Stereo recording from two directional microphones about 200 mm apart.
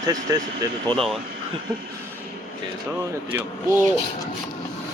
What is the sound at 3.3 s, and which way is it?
Speech, 10° right (ahead or behind).